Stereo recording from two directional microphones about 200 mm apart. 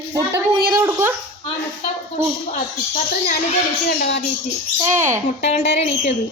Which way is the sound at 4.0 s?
60° left (ahead or behind).